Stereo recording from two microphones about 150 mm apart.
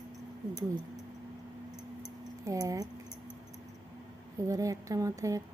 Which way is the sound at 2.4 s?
20° right (ahead or behind).